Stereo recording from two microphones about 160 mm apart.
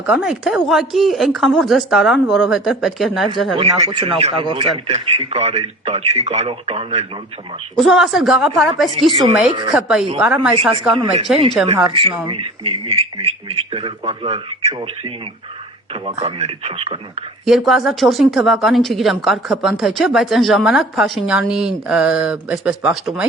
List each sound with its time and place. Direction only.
0.0 s speech: 5° right (ahead or behind)
3.6 s speech: 35° right (ahead or behind)
7.8 s speech: centre (ahead or behind)
9.0 s a woman's voice: 35° right (ahead or behind)
9.7 s speech: 5° right (ahead or behind)
10.9 s speech: 35° right (ahead or behind)
17.4 s speech: centre (ahead or behind)